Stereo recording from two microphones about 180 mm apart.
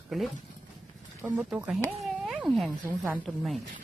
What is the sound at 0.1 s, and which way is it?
Speech, centre (ahead or behind).